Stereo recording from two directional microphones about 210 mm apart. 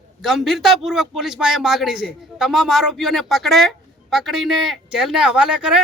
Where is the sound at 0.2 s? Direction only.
Centre (ahead or behind).